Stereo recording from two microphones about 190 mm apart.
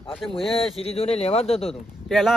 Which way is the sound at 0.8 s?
30° left (ahead or behind).